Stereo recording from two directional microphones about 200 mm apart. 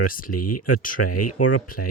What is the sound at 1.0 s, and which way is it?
Speech, 90° left.